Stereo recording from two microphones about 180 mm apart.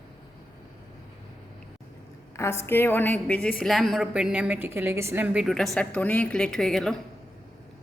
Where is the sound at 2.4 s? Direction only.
15° left (ahead or behind).